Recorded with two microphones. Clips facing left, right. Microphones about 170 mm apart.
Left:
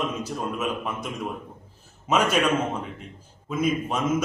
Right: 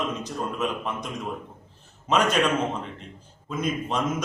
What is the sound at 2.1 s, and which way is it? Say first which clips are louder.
Speech: even; 5° left (ahead or behind).